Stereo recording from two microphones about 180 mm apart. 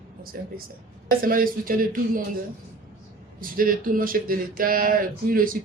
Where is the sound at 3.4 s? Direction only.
50° right (ahead or behind).